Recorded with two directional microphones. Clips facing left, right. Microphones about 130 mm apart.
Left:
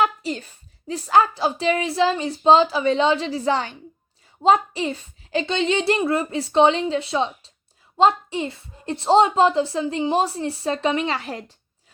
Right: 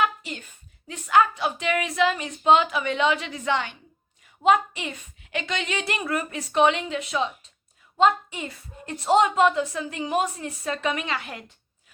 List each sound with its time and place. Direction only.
0.0 s a woman's voice: 35° left (ahead or behind)